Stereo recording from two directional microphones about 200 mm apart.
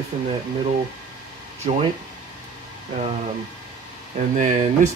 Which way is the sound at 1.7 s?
30° right (ahead or behind).